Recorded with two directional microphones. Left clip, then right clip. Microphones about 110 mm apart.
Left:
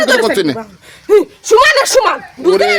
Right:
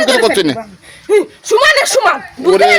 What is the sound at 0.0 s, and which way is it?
Speech, 20° left (ahead or behind).